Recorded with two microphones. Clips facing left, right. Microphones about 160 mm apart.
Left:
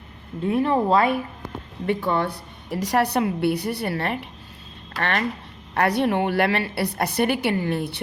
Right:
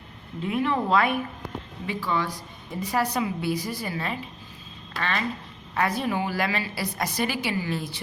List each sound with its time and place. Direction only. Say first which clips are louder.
0.4 s speech: left 5 dB; 35° left (ahead or behind)
2.0 s a woman's voice: left 4 dB; 60° left (ahead or behind)